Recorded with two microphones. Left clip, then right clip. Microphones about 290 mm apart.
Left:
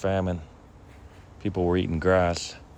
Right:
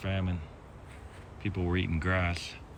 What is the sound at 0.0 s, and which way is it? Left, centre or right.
Speech, centre.